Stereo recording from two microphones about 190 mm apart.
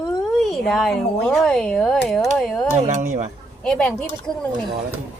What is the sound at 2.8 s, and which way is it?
Speech, 40° right (ahead or behind).